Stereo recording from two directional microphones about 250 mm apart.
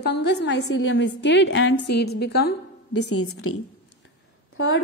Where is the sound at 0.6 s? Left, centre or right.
Left.